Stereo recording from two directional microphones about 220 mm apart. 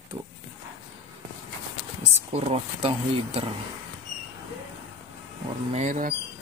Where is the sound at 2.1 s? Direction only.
30° right (ahead or behind).